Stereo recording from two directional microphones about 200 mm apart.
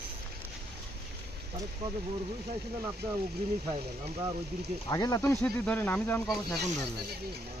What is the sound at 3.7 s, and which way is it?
Speech, 25° right (ahead or behind).